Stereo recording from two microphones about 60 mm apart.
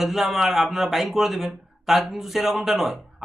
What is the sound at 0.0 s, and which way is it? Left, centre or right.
Speech, centre.